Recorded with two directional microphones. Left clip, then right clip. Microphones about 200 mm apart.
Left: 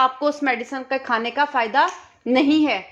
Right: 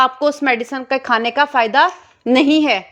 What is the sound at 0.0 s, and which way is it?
A woman's voice, 30° right (ahead or behind).